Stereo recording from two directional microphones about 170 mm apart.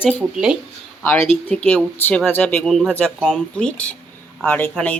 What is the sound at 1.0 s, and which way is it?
Speech, 10° left (ahead or behind).